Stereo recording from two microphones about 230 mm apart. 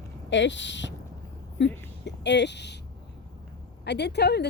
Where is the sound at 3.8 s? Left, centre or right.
Left.